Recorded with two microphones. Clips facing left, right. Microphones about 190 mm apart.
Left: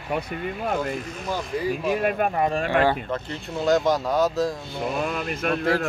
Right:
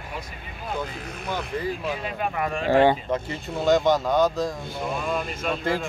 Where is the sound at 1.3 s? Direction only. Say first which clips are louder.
Left 2 dB; 10° left (ahead or behind).